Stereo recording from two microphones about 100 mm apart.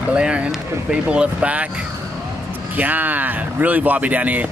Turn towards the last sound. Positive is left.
turn(degrees=-15)  # may be behind; listen again after turning